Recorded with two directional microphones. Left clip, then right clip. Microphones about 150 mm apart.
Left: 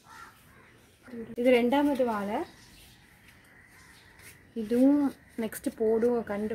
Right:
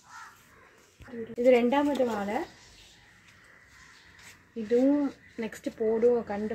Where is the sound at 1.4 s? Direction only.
5° left (ahead or behind).